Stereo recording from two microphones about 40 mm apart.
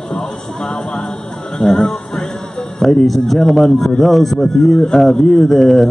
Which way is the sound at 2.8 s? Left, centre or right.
Centre.